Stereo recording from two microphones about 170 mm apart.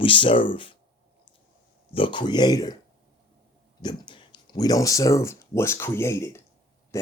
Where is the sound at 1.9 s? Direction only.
30° left (ahead or behind).